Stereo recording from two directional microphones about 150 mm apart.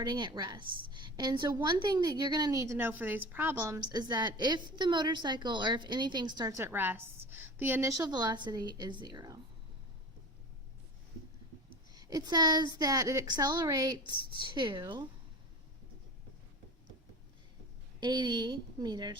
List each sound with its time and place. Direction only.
0.0 s a woman's voice: 30° right (ahead or behind)
3.9 s a woman's voice: 30° right (ahead or behind)
6.6 s a woman's voice: 15° right (ahead or behind)
11.9 s a woman's voice: 25° right (ahead or behind)
18.0 s a woman's voice: 30° right (ahead or behind)